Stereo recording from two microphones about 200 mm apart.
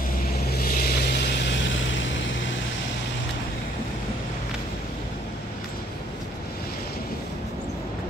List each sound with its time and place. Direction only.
0.5 s vehicle: 45° left (ahead or behind); by 2.2 s 65° left (ahead or behind)